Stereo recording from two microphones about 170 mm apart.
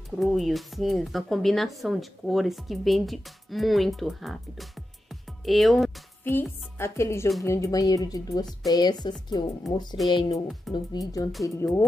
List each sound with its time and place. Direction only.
0.2 s speech: centre (ahead or behind)
5.4 s music: centre (ahead or behind)
6.8 s speech: 15° left (ahead or behind)